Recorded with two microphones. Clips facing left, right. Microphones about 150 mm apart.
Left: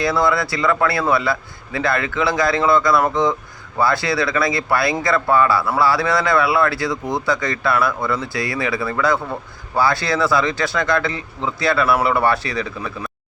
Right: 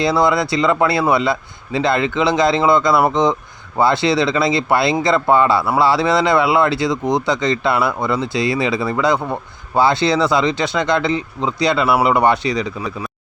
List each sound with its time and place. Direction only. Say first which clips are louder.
0.0 s speech: right 3 dB; 20° right (ahead or behind)